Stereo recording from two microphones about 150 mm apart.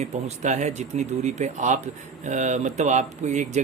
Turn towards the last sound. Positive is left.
turn(degrees=-50)  # may be behind; listen again after turning